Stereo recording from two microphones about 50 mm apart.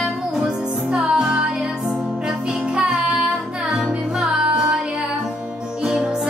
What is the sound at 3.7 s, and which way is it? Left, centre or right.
Music, centre.